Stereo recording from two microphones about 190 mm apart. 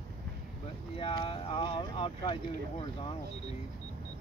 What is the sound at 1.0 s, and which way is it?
Vehicle, 30° left (ahead or behind).